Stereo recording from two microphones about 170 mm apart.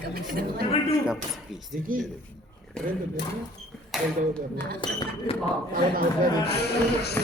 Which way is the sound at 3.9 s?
Centre (ahead or behind).